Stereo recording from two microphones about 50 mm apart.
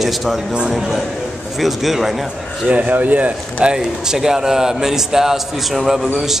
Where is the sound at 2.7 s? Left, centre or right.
Right.